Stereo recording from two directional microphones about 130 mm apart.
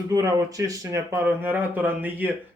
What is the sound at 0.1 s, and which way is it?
A man's voice, 25° right (ahead or behind).